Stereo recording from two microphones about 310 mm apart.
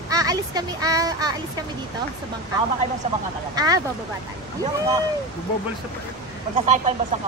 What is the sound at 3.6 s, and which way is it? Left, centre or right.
Speech, centre.